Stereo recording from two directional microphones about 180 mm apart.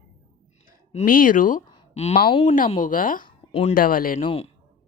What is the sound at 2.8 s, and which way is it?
Speech, 50° left (ahead or behind).